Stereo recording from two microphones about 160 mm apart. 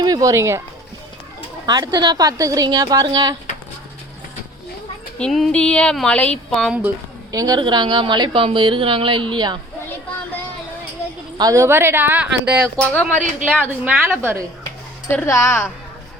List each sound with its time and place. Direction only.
0.0 s speech: 25° right (ahead or behind)
1.6 s a woman's voice: 25° right (ahead or behind)
5.1 s speech: 5° left (ahead or behind)
6.8 s a woman's voice: 20° right (ahead or behind)
11.3 s a woman's voice: 20° right (ahead or behind)
12.7 s speech: 10° left (ahead or behind)
13.4 s a woman's voice: 10° right (ahead or behind)
15.1 s speech: 15° left (ahead or behind)